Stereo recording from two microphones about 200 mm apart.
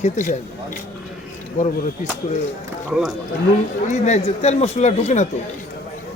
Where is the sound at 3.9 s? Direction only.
35° left (ahead or behind).